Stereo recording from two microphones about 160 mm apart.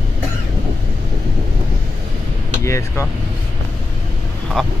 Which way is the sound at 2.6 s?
20° left (ahead or behind).